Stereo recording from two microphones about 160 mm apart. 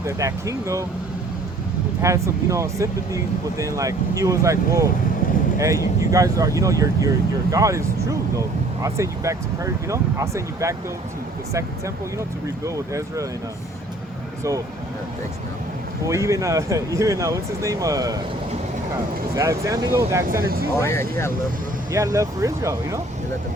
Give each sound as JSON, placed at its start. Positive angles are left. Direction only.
{"t": 0.0, "sound": "speech", "side_deg": -20}
{"t": 2.0, "sound": "speech", "side_deg": -20}
{"t": 5.2, "sound": "vehicle", "side_deg": 55}
{"t": 5.5, "sound": "speech", "side_deg": -20}
{"t": 12.5, "sound": "speech", "side_deg": -20}
{"t": 16.0, "sound": "speech", "side_deg": -20}
{"t": 19.3, "sound": "speech", "side_deg": -20}
{"t": 20.8, "sound": "speech", "side_deg": 15}
{"t": 21.9, "sound": "speech", "side_deg": -20}